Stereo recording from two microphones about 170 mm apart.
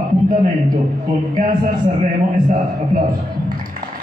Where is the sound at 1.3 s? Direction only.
50° right (ahead or behind).